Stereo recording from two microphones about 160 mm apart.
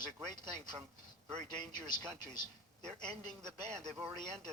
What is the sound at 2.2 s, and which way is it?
Speech, 25° left (ahead or behind).